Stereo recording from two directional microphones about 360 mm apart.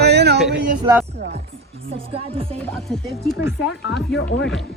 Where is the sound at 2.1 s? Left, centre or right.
Centre.